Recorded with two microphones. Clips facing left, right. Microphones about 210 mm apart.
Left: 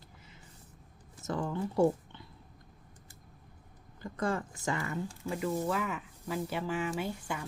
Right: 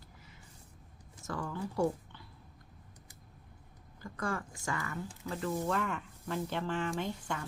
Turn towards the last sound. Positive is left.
turn(degrees=10)  # may be behind; listen again after turning